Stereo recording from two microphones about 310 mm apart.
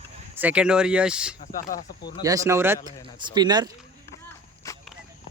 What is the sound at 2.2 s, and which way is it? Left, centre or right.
Speech, centre.